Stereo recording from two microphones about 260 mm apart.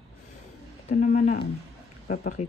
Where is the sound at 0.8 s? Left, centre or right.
Left.